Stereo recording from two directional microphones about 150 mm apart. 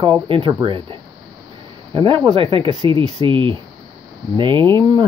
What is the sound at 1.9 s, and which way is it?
Speech, 35° right (ahead or behind).